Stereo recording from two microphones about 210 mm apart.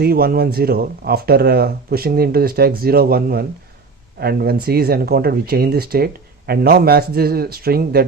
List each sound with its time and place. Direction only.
0.0 s speech: 45° right (ahead or behind)